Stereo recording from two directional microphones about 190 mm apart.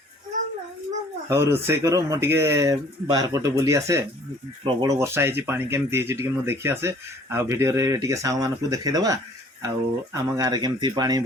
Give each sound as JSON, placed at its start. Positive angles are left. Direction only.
{"t": 1.3, "sound": "speech", "side_deg": -15}